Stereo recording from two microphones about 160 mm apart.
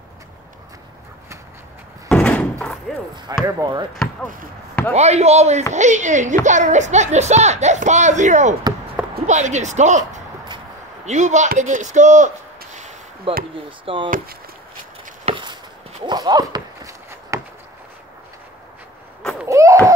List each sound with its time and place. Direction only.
2.0 s door: 5° left (ahead or behind)
2.9 s speech: 5° left (ahead or behind)
3.4 s speech: 20° right (ahead or behind)
3.9 s speech: centre (ahead or behind)
4.9 s a woman's voice: 45° right (ahead or behind)
13.3 s speech: 35° right (ahead or behind)
15.2 s a sound: 35° right (ahead or behind)
19.4 s a sound: 20° right (ahead or behind)